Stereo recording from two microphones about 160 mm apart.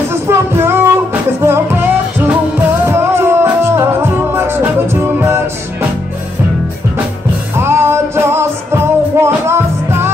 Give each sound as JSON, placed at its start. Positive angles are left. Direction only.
{"t": 0.1, "sound": "music", "side_deg": -15}
{"t": 7.5, "sound": "music", "side_deg": -15}